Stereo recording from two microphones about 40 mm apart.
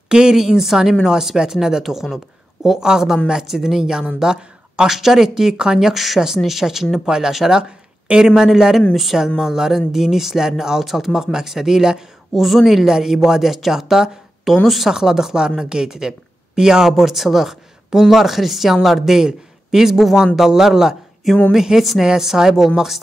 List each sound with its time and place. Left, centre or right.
0.1 s speech: centre
4.8 s speech: centre
9.4 s speech: centre
12.4 s speech: centre
12.8 s speech: centre
14.9 s speech: centre
16.9 s a man's voice: centre